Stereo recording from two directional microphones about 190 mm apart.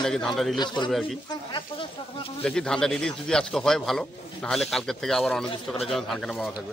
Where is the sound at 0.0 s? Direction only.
5° left (ahead or behind).